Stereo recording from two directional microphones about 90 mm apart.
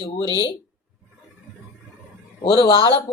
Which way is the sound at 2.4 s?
60° left (ahead or behind).